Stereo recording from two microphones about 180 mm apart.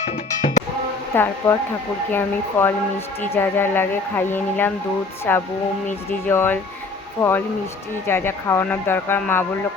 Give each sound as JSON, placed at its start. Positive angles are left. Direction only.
{"t": 0.0, "sound": "cowbell", "side_deg": 40}
{"t": 1.1, "sound": "speech", "side_deg": 10}